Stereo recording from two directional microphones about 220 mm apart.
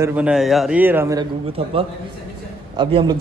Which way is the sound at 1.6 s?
25° right (ahead or behind).